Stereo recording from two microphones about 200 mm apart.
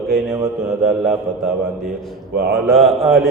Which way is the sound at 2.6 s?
Centre (ahead or behind).